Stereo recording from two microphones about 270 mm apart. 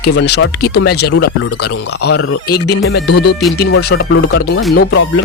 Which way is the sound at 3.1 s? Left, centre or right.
Left.